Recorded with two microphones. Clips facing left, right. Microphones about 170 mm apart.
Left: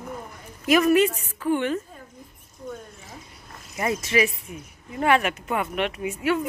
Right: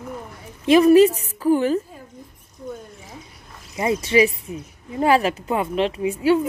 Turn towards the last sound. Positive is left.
turn(degrees=-30)  # may be behind; listen again after turning